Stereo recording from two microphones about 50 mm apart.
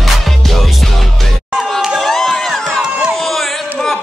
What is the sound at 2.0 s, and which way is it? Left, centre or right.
Crowd, centre.